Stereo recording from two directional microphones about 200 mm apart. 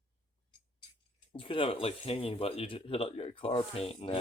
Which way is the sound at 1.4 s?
25° left (ahead or behind).